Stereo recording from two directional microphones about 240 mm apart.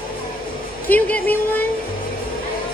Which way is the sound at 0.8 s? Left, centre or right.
Centre.